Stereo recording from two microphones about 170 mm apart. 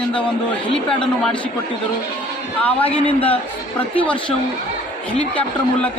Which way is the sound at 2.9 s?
35° left (ahead or behind).